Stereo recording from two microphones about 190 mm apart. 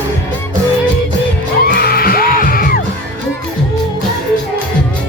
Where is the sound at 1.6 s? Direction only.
50° left (ahead or behind).